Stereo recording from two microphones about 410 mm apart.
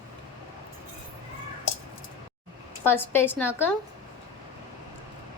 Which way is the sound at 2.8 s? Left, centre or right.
Centre.